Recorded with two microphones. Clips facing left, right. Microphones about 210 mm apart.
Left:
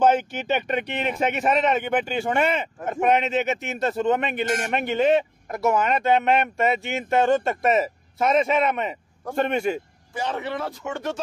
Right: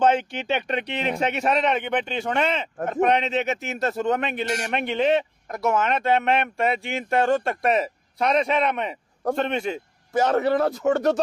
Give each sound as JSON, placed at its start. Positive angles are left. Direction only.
{"t": 0.0, "sound": "speech", "side_deg": 5}
{"t": 10.1, "sound": "speech", "side_deg": -45}